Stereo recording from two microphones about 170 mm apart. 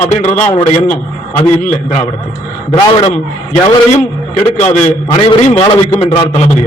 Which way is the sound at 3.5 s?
40° left (ahead or behind).